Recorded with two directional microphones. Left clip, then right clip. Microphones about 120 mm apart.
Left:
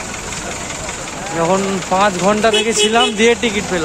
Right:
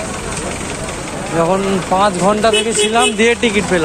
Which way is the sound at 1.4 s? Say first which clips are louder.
Right 1 dB; 30° left (ahead or behind).